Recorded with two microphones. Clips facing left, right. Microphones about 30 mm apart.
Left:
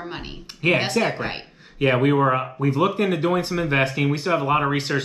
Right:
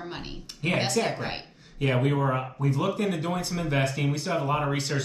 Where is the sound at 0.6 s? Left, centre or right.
Left.